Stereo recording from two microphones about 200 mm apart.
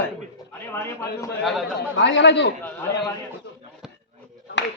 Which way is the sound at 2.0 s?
60° left (ahead or behind).